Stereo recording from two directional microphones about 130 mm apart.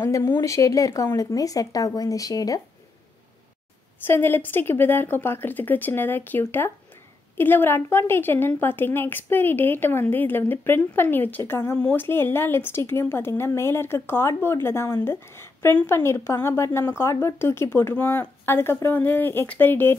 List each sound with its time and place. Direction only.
0.0 s speech: 20° left (ahead or behind)
4.0 s speech: 15° left (ahead or behind)